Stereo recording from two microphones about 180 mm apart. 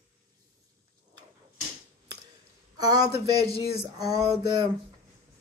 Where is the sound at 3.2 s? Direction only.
20° right (ahead or behind).